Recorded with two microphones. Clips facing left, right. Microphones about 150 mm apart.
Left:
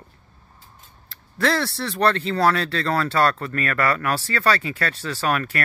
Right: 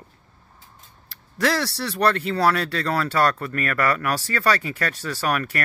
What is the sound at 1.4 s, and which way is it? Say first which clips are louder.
Speech: left 1 dB; 10° right (ahead or behind).